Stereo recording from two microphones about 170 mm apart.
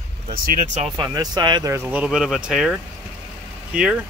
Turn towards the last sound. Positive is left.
turn(degrees=-5)  # may be behind; listen again after turning